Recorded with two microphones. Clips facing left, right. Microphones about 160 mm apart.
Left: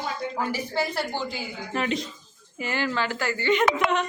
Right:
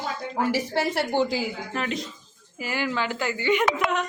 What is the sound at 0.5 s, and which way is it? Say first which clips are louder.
Speech: right 3 dB; 85° right.